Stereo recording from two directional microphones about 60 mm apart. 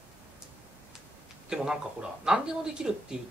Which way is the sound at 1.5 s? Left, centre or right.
Centre.